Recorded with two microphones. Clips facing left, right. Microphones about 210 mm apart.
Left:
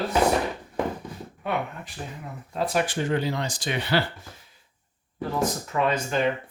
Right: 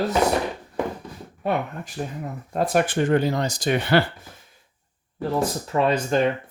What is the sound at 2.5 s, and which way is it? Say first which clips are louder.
Speech: right 4 dB; 50° right (ahead or behind).